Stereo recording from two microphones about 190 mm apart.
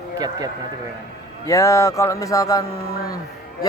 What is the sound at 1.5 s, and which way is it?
Speech, 15° left (ahead or behind).